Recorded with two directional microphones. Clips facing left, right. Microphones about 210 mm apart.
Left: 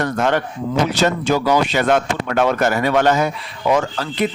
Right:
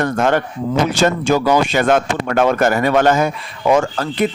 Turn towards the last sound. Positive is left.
turn(degrees=-50)  # may be behind; listen again after turning